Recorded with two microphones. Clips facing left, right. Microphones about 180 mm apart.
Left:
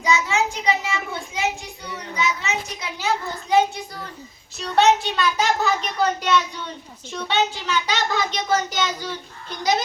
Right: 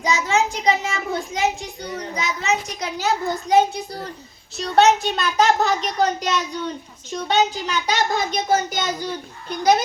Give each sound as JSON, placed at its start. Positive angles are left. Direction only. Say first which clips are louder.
{"t": 0.0, "sound": "a child's voice", "louder": "right 1 dB", "side_deg": -35}